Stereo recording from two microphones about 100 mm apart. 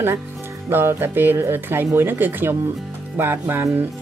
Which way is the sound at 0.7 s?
25° right (ahead or behind).